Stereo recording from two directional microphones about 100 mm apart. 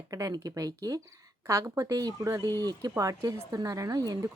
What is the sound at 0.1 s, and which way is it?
A woman's voice, 35° right (ahead or behind).